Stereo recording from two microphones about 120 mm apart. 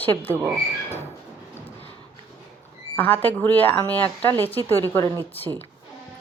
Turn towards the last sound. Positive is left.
turn(degrees=15)  # may be behind; listen again after turning